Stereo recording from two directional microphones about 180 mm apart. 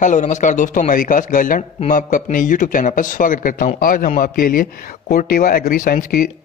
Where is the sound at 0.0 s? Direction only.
45° left (ahead or behind).